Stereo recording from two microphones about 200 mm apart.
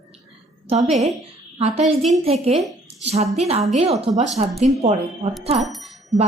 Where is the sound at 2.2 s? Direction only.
30° right (ahead or behind).